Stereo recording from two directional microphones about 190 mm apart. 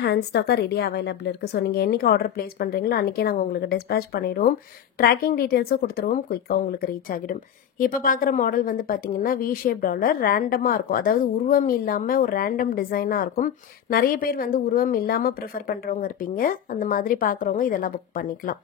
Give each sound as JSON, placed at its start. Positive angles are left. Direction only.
{"t": 0.0, "sound": "a woman's voice", "side_deg": 60}